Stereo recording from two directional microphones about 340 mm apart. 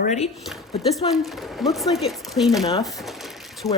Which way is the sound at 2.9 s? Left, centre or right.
Centre.